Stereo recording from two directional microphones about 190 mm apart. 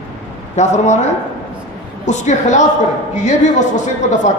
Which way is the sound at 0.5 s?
40° left (ahead or behind).